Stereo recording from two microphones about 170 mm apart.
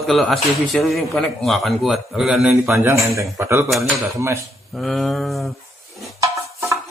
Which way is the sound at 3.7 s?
Centre (ahead or behind).